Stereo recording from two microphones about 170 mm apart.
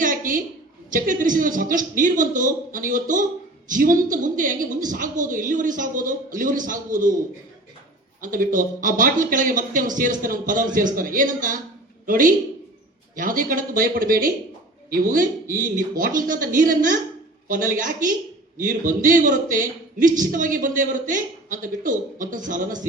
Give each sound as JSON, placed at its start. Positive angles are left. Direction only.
{"t": 0.0, "sound": "a sound", "side_deg": -50}
{"t": 0.9, "sound": "a man's voice", "side_deg": -50}
{"t": 8.2, "sound": "a man's voice", "side_deg": -50}